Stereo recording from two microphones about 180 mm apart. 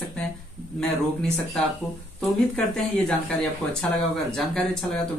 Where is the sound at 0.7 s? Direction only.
5° left (ahead or behind).